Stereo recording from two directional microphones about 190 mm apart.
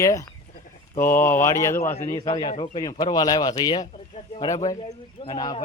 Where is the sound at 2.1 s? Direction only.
25° left (ahead or behind).